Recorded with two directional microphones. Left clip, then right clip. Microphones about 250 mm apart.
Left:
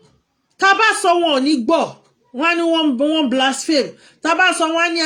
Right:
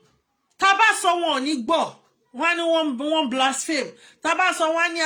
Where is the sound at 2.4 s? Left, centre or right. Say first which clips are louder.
Left 4 dB; centre.